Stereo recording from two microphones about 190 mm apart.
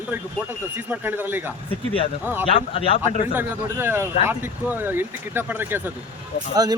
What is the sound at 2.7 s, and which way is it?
Speech, 30° left (ahead or behind).